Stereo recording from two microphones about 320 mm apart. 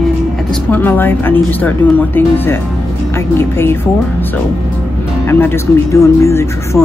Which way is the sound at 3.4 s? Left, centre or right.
Centre.